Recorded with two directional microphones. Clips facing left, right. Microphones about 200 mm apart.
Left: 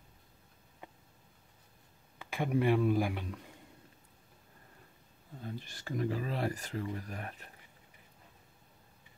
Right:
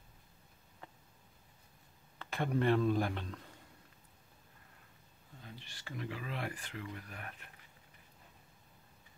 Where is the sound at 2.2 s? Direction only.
10° left (ahead or behind).